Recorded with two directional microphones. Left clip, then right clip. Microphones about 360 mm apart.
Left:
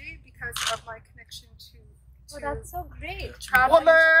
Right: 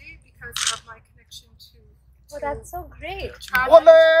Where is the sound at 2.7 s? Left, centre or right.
Centre.